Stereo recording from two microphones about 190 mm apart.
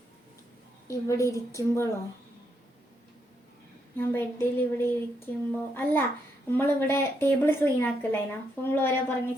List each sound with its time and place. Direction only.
0.9 s a woman's voice: 15° left (ahead or behind)
3.9 s a woman's voice: 10° left (ahead or behind)